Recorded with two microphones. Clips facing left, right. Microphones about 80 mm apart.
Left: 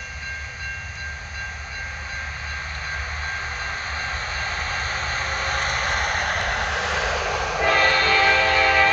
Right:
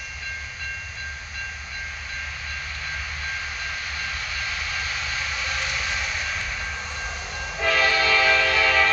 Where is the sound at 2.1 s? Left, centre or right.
Left.